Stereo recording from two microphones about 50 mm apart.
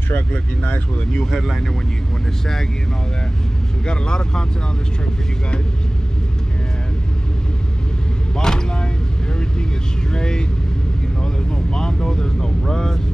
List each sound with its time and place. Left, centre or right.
0.1 s speech: left
1.3 s speech: centre
3.8 s speech: centre
8.4 s vehicle: centre
10.1 s speech: centre
11.7 s speech: centre